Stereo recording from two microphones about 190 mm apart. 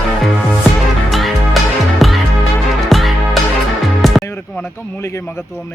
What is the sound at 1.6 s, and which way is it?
Music, centre (ahead or behind).